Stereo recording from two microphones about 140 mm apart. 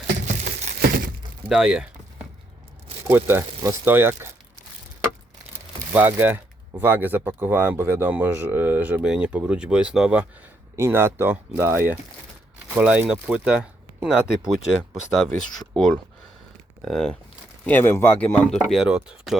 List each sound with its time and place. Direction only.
0.3 s crumpling: 60° right (ahead or behind)
1.5 s a sound: 5° right (ahead or behind)
3.1 s speech: 15° right (ahead or behind)
5.9 s speech: 15° right (ahead or behind)
10.8 s speech: 20° right (ahead or behind)
15.3 s speech: 5° left (ahead or behind)
17.7 s speech: 15° left (ahead or behind)
18.7 s speech: 5° right (ahead or behind)